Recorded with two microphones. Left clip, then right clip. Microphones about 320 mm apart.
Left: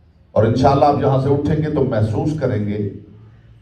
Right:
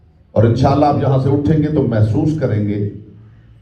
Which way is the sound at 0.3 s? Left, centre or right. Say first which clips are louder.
Even; left.